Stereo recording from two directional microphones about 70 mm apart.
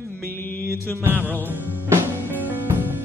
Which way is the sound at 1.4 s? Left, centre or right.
Right.